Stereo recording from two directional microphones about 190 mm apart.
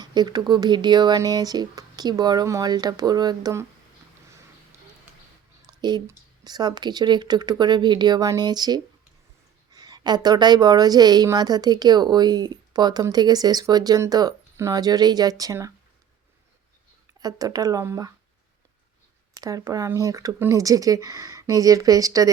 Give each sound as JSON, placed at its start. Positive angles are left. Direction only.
{"t": 0.0, "sound": "a woman's voice", "side_deg": -20}
{"t": 5.8, "sound": "a woman's voice", "side_deg": -20}
{"t": 17.2, "sound": "a woman's voice", "side_deg": -20}
{"t": 19.4, "sound": "speech", "side_deg": -20}